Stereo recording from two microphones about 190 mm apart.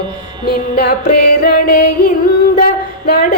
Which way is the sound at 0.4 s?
50° left (ahead or behind).